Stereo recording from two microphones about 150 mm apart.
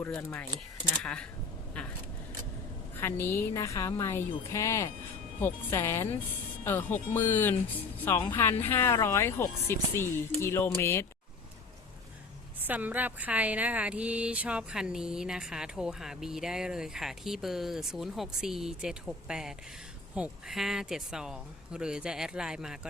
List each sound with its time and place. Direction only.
0.2 s speech: 15° left (ahead or behind)
3.0 s a woman's voice: 15° left (ahead or behind)
12.6 s speech: 10° right (ahead or behind)